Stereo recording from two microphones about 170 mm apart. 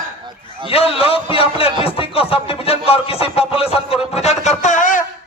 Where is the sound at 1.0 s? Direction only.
35° left (ahead or behind).